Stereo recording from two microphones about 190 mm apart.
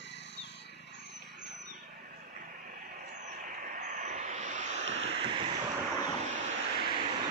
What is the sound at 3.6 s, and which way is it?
Vehicle, 40° right (ahead or behind).